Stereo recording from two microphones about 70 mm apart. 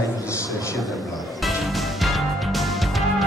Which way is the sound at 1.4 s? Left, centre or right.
Centre.